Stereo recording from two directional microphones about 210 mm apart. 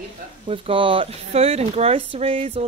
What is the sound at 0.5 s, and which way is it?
Speech, 25° right (ahead or behind).